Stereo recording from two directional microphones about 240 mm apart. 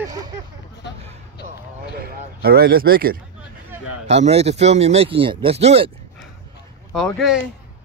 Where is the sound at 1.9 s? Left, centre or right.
Right.